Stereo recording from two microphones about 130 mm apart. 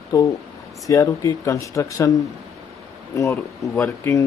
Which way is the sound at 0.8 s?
25° left (ahead or behind).